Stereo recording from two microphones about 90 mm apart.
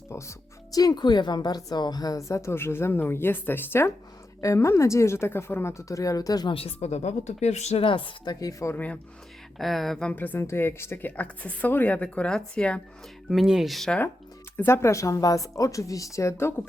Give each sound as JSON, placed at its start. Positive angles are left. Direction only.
{"t": 0.1, "sound": "speech", "side_deg": 35}
{"t": 6.5, "sound": "speech", "side_deg": 90}
{"t": 7.8, "sound": "speech", "side_deg": 75}
{"t": 8.7, "sound": "speech", "side_deg": 15}
{"t": 9.6, "sound": "speech", "side_deg": 0}
{"t": 10.1, "sound": "a woman's voice", "side_deg": 20}
{"t": 13.3, "sound": "speech", "side_deg": -5}
{"t": 14.5, "sound": "speech", "side_deg": 25}